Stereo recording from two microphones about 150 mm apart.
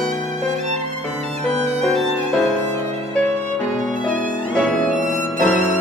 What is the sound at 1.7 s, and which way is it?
Violin, 5° left (ahead or behind).